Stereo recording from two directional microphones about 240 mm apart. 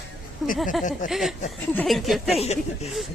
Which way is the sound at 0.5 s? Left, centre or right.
Centre.